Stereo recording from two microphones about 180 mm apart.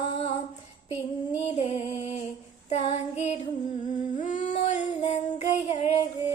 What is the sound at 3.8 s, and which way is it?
Humming, 45° left (ahead or behind).